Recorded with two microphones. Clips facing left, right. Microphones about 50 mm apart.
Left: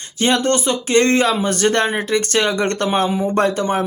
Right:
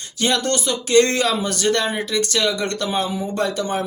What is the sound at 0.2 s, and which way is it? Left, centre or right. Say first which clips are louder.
Speech: left 4 dB; left.